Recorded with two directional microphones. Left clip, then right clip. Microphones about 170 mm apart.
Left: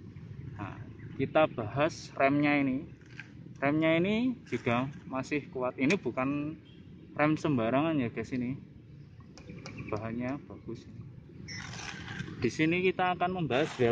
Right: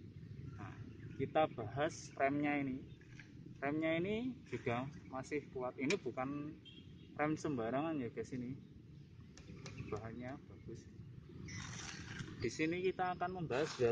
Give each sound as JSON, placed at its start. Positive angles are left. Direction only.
{"t": 0.6, "sound": "speech", "side_deg": 50}
{"t": 9.8, "sound": "speech", "side_deg": 55}
{"t": 11.6, "sound": "vehicle", "side_deg": -15}
{"t": 12.4, "sound": "speech", "side_deg": 50}